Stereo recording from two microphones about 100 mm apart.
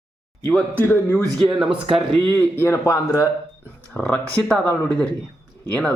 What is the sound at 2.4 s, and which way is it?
Speech, 25° left (ahead or behind).